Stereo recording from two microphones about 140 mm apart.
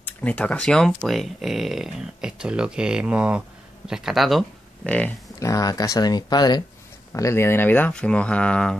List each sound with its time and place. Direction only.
0.0 s speech: 10° left (ahead or behind)
4.8 s speech: 10° left (ahead or behind)
5.4 s speech: 25° left (ahead or behind)
7.1 s speech: 20° left (ahead or behind)